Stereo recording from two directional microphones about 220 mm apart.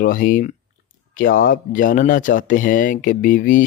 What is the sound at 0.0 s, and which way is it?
Speech, 40° left (ahead or behind).